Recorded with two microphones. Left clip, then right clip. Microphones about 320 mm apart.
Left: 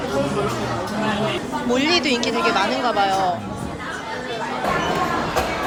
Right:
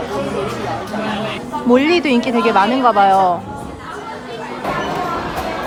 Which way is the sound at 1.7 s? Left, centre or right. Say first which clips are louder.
Right 5 dB; centre.